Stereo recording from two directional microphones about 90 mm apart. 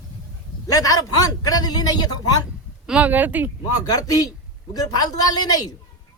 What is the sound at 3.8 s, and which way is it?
A man's voice, 45° left (ahead or behind).